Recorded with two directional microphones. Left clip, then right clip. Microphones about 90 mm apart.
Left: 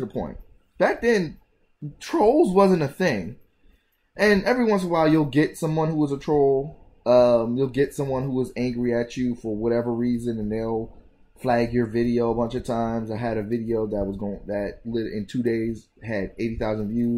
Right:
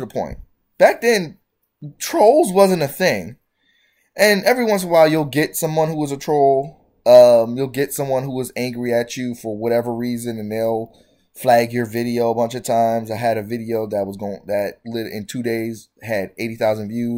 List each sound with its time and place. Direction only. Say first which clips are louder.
0.0 s speech: right 6 dB; 30° right (ahead or behind)